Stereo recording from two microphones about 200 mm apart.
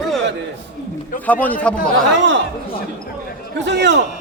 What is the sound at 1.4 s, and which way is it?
Speech, 5° left (ahead or behind).